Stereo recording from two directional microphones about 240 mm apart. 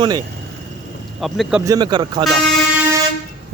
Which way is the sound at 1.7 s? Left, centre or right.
Centre.